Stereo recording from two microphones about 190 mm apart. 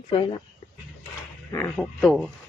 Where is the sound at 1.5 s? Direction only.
15° left (ahead or behind).